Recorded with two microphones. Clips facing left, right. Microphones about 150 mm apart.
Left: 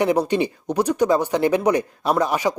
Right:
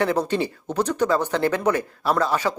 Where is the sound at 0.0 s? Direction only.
15° left (ahead or behind).